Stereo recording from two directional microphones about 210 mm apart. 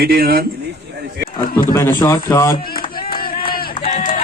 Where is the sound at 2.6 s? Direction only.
45° left (ahead or behind).